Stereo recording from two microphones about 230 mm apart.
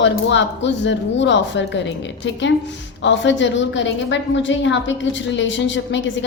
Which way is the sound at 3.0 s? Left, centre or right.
Left.